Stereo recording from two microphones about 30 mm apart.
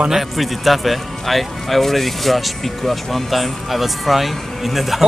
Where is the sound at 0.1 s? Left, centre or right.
Centre.